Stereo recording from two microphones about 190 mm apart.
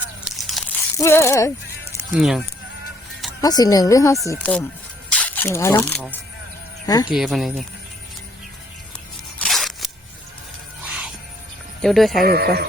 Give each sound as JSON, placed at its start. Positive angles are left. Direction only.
{"t": 0.3, "sound": "crunch", "side_deg": 0}
{"t": 0.9, "sound": "speech", "side_deg": 15}
{"t": 2.1, "sound": "speech", "side_deg": -5}
{"t": 3.4, "sound": "a woman's voice", "side_deg": 20}
{"t": 7.1, "sound": "speech", "side_deg": 0}
{"t": 9.4, "sound": "a sound", "side_deg": 0}
{"t": 10.8, "sound": "music", "side_deg": -5}
{"t": 11.8, "sound": "speech", "side_deg": 0}
{"t": 12.2, "sound": "speech", "side_deg": -55}